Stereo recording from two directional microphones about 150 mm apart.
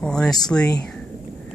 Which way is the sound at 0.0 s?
5° left (ahead or behind).